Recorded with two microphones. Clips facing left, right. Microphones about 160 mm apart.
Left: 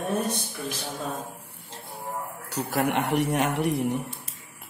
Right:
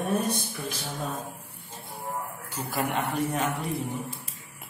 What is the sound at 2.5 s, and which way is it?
Speech, 70° left (ahead or behind).